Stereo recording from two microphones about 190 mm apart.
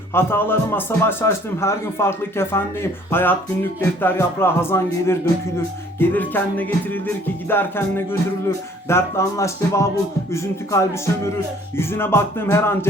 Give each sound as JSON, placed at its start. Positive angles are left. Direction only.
{"t": 0.1, "sound": "a man's voice", "side_deg": 10}